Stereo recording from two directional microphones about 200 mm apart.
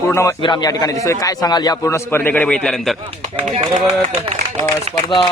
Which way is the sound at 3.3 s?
30° right (ahead or behind).